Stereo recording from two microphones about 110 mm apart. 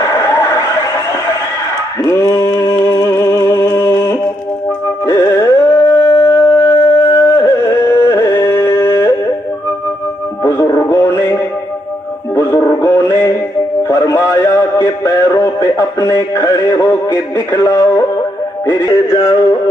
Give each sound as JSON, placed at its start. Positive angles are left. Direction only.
{"t": 0.0, "sound": "a sound", "side_deg": 25}
{"t": 2.0, "sound": "music", "side_deg": 30}
{"t": 5.0, "sound": "carnatic music", "side_deg": 25}
{"t": 6.0, "sound": "shofar", "side_deg": 50}
{"t": 6.2, "sound": "music", "side_deg": 25}
{"t": 10.4, "sound": "music", "side_deg": 25}
{"t": 13.8, "sound": "synthetic singing", "side_deg": 25}